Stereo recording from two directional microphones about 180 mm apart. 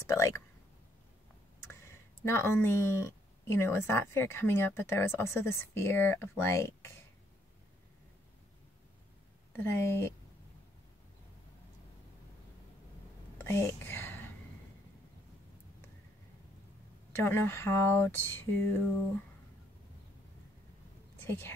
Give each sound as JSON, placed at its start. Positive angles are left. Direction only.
{"t": 0.0, "sound": "speech", "side_deg": 15}
{"t": 1.6, "sound": "speech", "side_deg": 15}
{"t": 9.5, "sound": "speech", "side_deg": 10}
{"t": 13.4, "sound": "whispering", "side_deg": 10}
{"t": 17.1, "sound": "speech", "side_deg": 15}
{"t": 21.2, "sound": "speech", "side_deg": 10}